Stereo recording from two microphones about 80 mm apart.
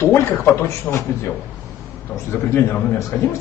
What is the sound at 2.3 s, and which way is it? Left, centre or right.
Speech, left.